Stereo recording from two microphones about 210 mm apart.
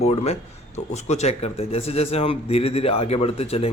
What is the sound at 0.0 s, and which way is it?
Speech, 30° left (ahead or behind).